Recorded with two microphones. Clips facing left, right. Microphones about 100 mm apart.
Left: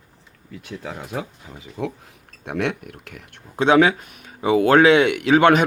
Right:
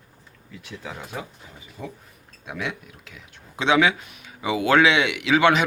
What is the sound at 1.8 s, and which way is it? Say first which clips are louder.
Speech: left 9 dB; 90° left.